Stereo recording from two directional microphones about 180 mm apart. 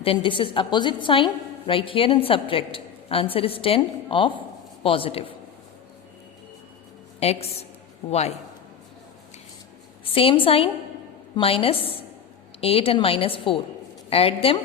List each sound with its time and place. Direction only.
0.0 s a woman's voice: 30° left (ahead or behind)
7.2 s a woman's voice: 35° left (ahead or behind)
10.0 s a woman's voice: 30° left (ahead or behind)